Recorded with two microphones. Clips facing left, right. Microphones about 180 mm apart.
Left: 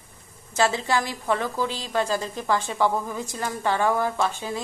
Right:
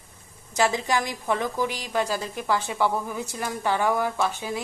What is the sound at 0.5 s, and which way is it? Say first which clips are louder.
A woman's voice: left 1 dB; 15° right (ahead or behind).